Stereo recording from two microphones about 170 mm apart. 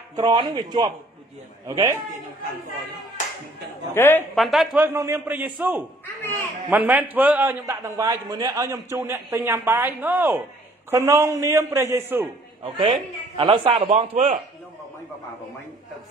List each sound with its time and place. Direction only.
0.1 s a man's voice: 25° right (ahead or behind)
3.9 s a woman's voice: 15° left (ahead or behind)
4.4 s a man's voice: centre (ahead or behind)
4.8 s a man's voice: 15° right (ahead or behind)
12.6 s a man's voice: 30° right (ahead or behind)